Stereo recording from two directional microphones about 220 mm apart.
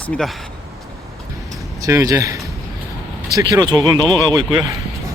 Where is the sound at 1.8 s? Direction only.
15° right (ahead or behind).